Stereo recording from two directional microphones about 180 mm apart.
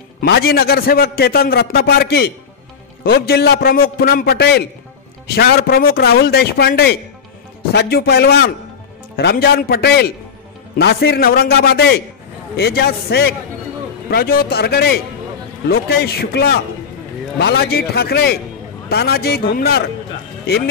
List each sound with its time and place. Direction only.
0.2 s a man's voice: 60° left (ahead or behind)